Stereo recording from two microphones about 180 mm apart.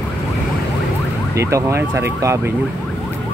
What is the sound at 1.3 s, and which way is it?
Speech, 15° right (ahead or behind).